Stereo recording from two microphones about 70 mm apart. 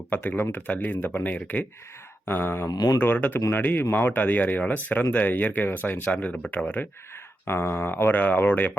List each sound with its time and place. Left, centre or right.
0.1 s speech: left
2.2 s a sound: left
2.6 s speech: left
3.0 s speech: left
7.4 s speech: left